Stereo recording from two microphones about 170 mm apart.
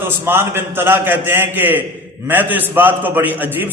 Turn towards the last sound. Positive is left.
turn(degrees=-10)  # may be behind; listen again after turning